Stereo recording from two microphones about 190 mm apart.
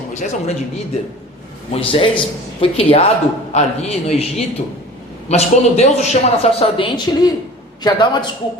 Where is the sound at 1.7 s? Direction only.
30° left (ahead or behind).